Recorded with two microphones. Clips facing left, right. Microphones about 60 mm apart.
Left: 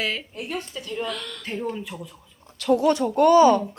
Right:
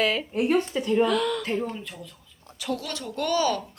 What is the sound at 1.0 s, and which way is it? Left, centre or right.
Speech, centre.